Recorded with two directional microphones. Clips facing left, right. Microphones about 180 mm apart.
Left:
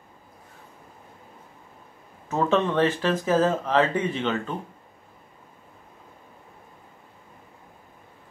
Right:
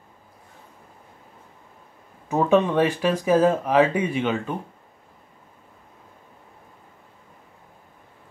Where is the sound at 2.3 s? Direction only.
10° right (ahead or behind).